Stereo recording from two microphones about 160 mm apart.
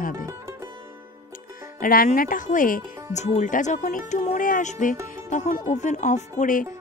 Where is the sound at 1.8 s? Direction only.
60° left (ahead or behind).